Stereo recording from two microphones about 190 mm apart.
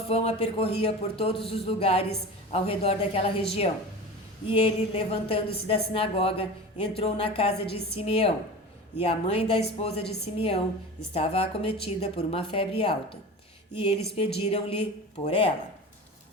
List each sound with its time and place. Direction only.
0.1 s a man's voice: 30° left (ahead or behind)
4.4 s a woman's voice: 25° left (ahead or behind)